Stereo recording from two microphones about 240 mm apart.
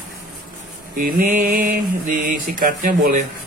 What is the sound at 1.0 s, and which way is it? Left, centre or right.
Mantra, right.